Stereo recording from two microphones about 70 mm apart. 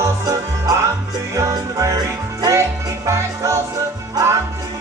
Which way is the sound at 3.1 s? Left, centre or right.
Right.